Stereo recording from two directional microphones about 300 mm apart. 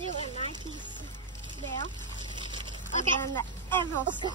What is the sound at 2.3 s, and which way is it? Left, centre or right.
Dog, centre.